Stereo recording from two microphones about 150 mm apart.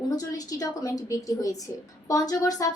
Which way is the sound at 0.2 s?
25° left (ahead or behind).